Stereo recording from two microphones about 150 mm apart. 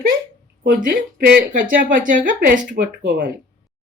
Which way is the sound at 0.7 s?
70° right (ahead or behind).